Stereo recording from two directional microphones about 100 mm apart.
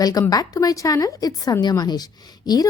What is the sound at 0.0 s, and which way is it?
A woman's voice, 40° left (ahead or behind).